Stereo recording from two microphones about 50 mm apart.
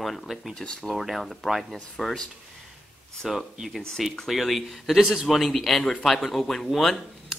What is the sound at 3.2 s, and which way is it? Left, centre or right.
Speech, centre.